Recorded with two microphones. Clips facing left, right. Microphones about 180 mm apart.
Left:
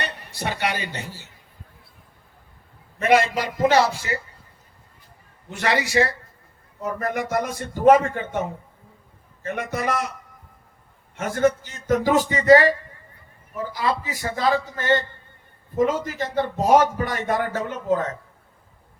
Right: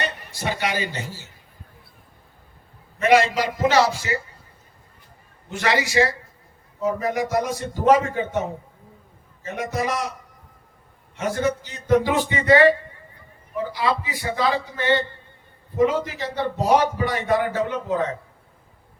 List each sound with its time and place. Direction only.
0.0 s speech: 60° left (ahead or behind)
3.1 s a man's voice: 55° left (ahead or behind)
5.5 s a man's voice: 60° left (ahead or behind)
11.2 s a man's voice: 50° left (ahead or behind)
13.7 s a man's voice: 45° left (ahead or behind)